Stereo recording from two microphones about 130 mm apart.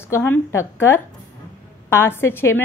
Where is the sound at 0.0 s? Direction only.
20° left (ahead or behind).